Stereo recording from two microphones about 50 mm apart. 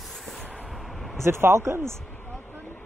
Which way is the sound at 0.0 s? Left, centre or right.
Centre.